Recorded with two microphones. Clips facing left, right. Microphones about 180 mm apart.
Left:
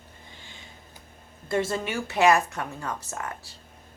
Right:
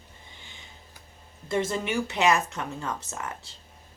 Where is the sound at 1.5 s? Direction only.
20° right (ahead or behind).